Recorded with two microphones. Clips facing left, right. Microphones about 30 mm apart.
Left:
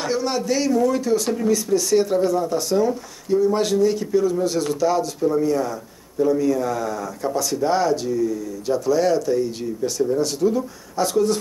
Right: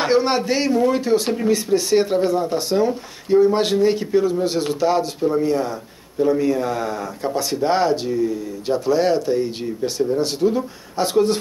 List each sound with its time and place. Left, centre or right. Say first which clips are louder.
0.0 s speech: right 5 dB; right